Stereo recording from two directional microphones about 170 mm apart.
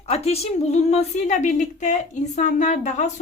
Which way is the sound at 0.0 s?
35° left (ahead or behind).